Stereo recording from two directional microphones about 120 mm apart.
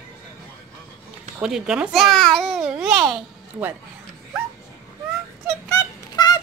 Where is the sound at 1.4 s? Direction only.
5° right (ahead or behind).